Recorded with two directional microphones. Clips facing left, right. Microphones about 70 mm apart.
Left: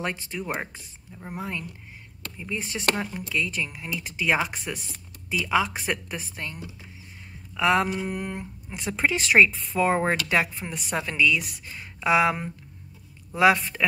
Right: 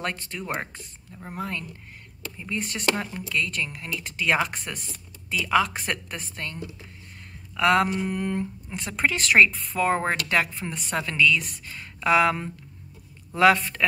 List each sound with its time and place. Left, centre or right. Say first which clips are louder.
0.0 s speech: left 1 dB; centre